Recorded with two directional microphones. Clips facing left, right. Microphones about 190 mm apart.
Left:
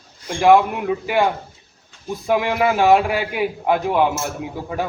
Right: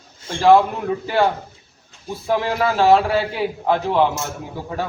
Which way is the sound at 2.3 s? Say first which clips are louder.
Left 2 dB; 15° left (ahead or behind).